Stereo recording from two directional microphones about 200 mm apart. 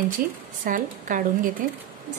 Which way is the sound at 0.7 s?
40° right (ahead or behind).